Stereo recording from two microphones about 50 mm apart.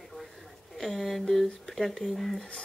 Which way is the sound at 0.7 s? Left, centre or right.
Centre.